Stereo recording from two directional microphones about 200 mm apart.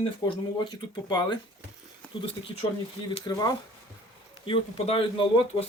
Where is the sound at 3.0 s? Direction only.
25° left (ahead or behind).